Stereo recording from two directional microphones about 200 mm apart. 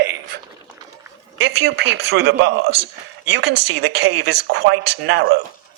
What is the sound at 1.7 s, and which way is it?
Speech, 55° right (ahead or behind).